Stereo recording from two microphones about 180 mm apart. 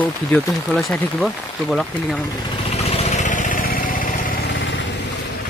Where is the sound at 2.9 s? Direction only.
35° left (ahead or behind).